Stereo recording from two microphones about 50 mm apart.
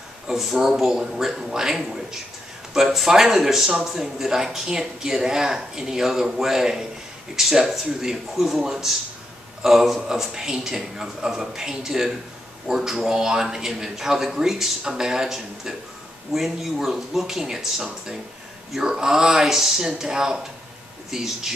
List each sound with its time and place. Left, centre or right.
0.3 s a man's voice: centre